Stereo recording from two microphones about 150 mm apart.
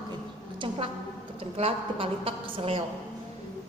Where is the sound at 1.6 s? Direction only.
40° right (ahead or behind).